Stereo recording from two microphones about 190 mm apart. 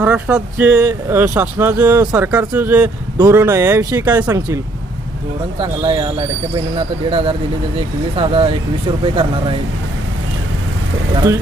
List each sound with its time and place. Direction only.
0.0 s speech: 5° right (ahead or behind); by 9.3 s 30° right (ahead or behind)